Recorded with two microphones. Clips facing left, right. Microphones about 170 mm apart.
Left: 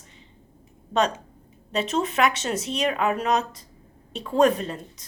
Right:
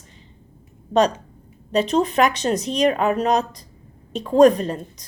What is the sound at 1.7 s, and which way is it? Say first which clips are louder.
A woman's voice: right 6 dB; 35° right (ahead or behind).